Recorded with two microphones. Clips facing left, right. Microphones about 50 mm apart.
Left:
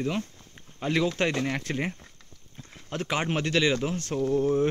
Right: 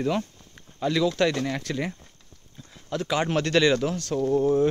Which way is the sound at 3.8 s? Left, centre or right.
Left.